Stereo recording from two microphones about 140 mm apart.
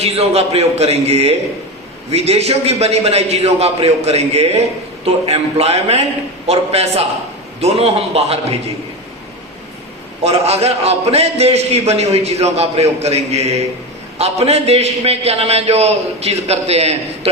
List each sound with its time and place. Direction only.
0.0 s a man's voice: 50° right (ahead or behind)
10.2 s a man's voice: 50° right (ahead or behind)